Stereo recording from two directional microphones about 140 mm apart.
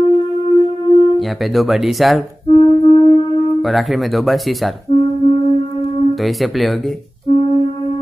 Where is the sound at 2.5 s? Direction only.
35° left (ahead or behind).